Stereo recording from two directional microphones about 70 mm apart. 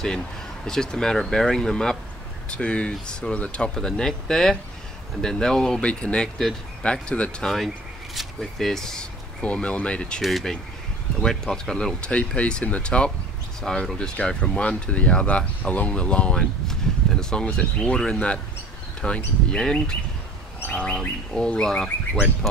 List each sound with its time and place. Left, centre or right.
0.7 s speech: centre
7.5 s speech: centre
9.4 s speech: centre